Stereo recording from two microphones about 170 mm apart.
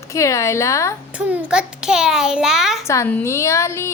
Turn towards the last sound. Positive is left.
turn(degrees=15)  # may be behind; listen again after turning